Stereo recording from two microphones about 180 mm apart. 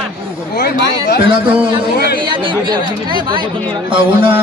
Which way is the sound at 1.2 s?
30° right (ahead or behind).